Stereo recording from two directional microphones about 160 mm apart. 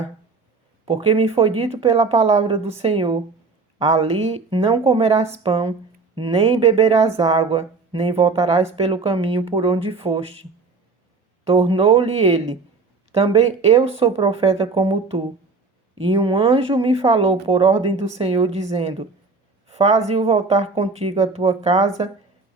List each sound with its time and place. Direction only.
0.9 s speech: 35° right (ahead or behind)
11.4 s speech: 35° right (ahead or behind)
19.6 s a sound: 40° right (ahead or behind)
20.1 s speech: 40° right (ahead or behind)